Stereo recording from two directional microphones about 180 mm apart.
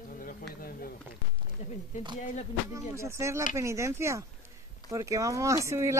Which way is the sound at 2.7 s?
15° right (ahead or behind).